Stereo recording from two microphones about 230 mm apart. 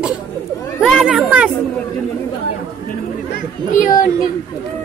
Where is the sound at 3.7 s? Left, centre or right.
Left.